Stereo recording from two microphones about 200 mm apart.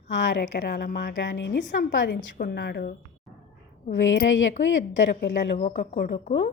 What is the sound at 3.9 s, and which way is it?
A woman's voice, 70° left (ahead or behind).